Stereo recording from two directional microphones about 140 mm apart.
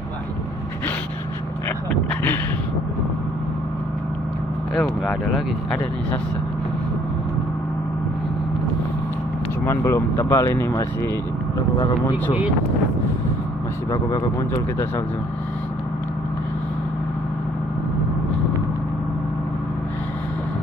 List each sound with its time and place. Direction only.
4.7 s speech: 5° left (ahead or behind)
9.7 s speech: 20° left (ahead or behind)